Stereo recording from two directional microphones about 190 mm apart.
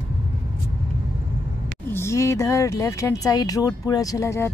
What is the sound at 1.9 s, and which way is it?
Speech, 15° left (ahead or behind).